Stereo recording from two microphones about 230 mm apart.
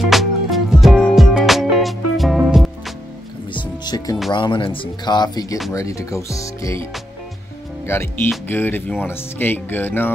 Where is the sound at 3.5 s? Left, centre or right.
Centre.